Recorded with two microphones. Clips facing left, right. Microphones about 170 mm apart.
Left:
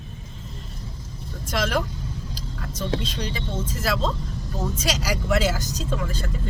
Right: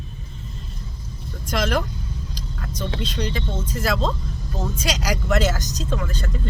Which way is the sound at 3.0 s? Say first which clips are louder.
Right 3 dB; 5° left (ahead or behind).